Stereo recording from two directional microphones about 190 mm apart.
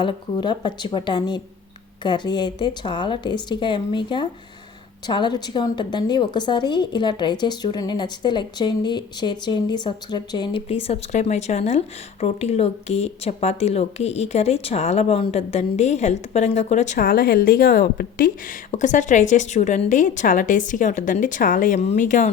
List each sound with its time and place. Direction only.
0.0 s a woman's voice: 25° left (ahead or behind); by 22.3 s 40° left (ahead or behind)